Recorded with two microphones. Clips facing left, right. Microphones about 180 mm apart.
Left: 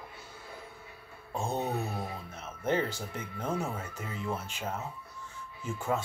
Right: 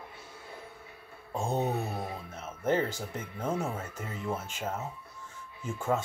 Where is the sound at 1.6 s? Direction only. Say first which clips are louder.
Right 2 dB; 25° right (ahead or behind).